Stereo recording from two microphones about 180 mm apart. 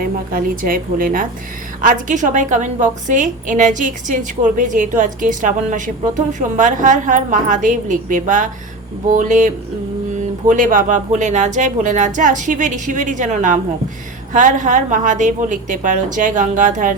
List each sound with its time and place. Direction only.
0.0 s a woman's voice: 50° right (ahead or behind)
10.5 s a woman's voice: 50° right (ahead or behind)